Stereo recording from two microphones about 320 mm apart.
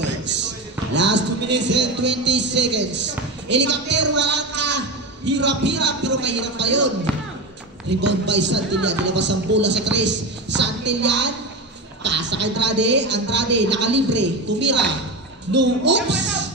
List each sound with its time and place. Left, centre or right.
0.9 s speech: right
8.0 s a woman's voice: right